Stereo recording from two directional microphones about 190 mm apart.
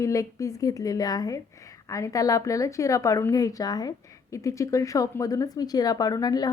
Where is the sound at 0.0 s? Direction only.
15° left (ahead or behind).